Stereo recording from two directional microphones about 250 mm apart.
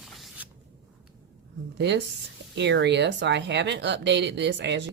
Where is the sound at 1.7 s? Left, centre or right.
Right.